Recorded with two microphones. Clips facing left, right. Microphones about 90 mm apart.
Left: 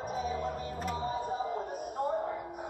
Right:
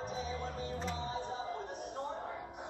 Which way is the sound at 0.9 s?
50° left (ahead or behind).